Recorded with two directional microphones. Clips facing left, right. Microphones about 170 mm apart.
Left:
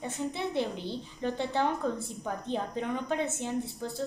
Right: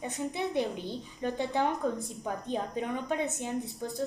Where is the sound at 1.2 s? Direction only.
15° right (ahead or behind).